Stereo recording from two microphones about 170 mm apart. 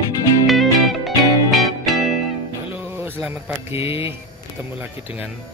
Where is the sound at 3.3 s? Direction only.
10° right (ahead or behind).